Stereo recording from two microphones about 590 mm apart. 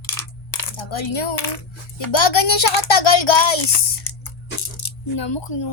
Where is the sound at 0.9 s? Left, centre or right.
Left.